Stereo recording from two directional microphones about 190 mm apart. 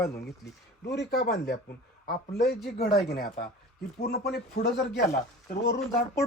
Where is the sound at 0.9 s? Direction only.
60° left (ahead or behind).